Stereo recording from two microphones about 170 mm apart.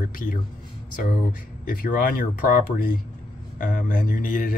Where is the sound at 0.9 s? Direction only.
50° left (ahead or behind).